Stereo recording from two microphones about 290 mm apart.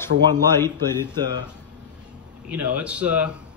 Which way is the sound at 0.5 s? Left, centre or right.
Centre.